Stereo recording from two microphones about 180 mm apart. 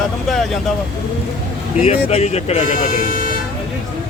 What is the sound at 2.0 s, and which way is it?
Speech, 35° left (ahead or behind).